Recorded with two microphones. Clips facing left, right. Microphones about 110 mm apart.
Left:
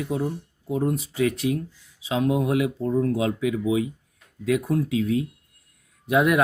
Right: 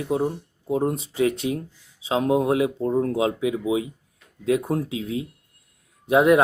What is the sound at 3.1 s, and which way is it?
Speech, 25° right (ahead or behind).